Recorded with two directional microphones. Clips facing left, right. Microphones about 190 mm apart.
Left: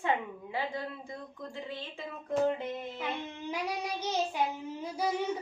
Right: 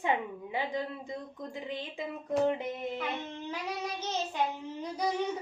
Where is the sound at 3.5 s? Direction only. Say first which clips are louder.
Left 3 dB; 10° left (ahead or behind).